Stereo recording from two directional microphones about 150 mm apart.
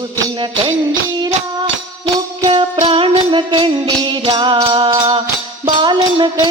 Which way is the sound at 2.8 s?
35° right (ahead or behind).